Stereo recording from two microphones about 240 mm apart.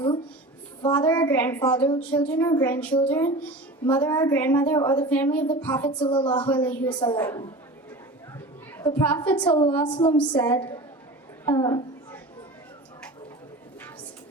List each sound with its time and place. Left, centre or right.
0.8 s a woman's voice: centre
5.9 s a woman's voice: centre
6.5 s a woman's voice: centre
8.8 s a woman's voice: centre
9.4 s a woman's voice: centre
11.4 s a sound: centre